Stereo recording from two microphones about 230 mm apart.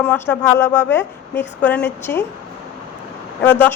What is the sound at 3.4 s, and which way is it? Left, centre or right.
Speech, centre.